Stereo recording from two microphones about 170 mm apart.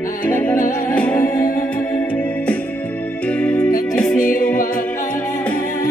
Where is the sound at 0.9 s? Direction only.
5° left (ahead or behind).